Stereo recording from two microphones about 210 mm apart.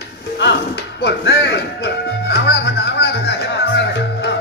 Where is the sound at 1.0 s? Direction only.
50° left (ahead or behind).